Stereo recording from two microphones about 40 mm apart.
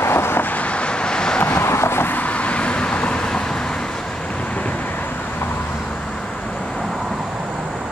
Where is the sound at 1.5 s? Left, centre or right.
Left.